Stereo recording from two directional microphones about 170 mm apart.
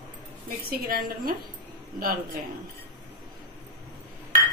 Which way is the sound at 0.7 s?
55° right (ahead or behind).